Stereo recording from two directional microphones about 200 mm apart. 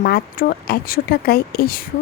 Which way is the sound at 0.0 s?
45° left (ahead or behind).